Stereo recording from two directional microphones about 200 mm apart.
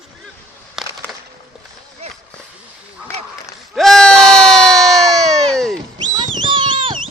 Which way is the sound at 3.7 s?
Centre (ahead or behind).